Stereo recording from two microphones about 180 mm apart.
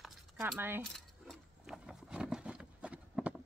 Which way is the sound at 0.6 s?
10° right (ahead or behind).